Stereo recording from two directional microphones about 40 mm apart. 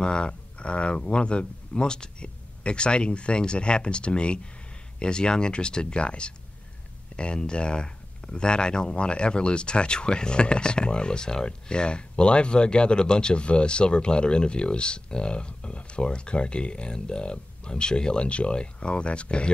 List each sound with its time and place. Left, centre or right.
0.0 s speech: left